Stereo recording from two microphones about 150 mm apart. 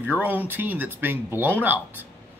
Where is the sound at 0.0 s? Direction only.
10° right (ahead or behind).